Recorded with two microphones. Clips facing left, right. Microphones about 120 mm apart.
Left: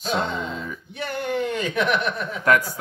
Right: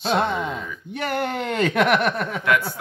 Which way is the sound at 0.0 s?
60° right (ahead or behind).